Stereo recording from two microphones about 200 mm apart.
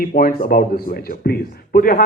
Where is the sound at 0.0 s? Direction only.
45° left (ahead or behind).